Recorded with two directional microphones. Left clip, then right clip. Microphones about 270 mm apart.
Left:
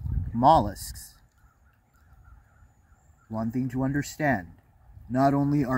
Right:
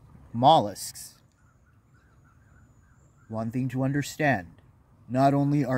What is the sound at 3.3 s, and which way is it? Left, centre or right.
Speech, centre.